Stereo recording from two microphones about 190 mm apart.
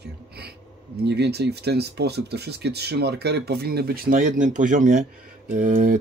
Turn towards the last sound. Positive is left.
turn(degrees=-45)  # may be behind; listen again after turning